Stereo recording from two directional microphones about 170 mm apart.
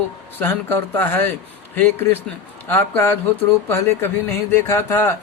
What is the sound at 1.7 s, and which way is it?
A man's voice, 10° left (ahead or behind).